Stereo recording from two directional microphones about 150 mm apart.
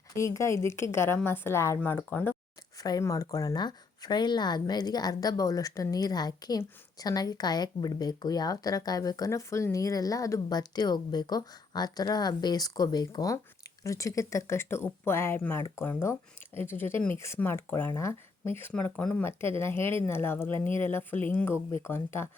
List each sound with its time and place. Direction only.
0.2 s speech: 20° left (ahead or behind)
2.8 s speech: 25° left (ahead or behind)